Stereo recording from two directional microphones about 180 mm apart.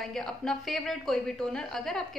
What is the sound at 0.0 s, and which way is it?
A woman's voice, centre (ahead or behind).